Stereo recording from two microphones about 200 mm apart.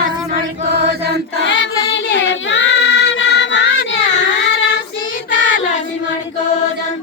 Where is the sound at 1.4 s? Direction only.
65° left (ahead or behind).